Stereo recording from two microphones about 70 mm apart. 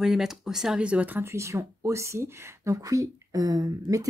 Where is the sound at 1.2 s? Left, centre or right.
Right.